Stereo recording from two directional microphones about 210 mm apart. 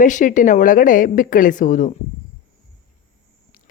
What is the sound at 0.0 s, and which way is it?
A woman's voice, 40° left (ahead or behind).